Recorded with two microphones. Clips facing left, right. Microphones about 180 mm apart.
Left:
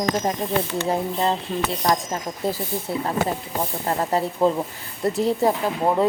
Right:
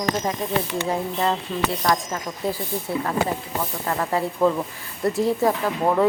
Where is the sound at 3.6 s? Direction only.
25° left (ahead or behind).